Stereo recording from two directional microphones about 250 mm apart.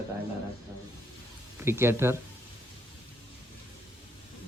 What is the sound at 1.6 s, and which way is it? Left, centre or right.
Speech, centre.